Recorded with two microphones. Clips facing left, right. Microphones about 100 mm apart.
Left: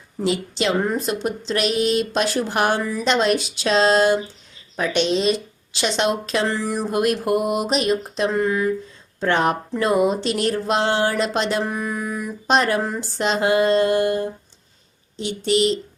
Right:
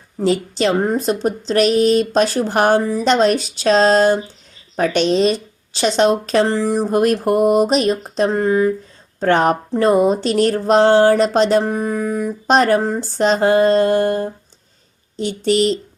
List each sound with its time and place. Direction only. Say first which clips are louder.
0.2 s speech: right 5 dB; 40° right (ahead or behind)